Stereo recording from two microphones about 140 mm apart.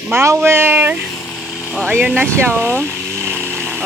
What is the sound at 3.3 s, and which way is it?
Chainsaw, 15° right (ahead or behind).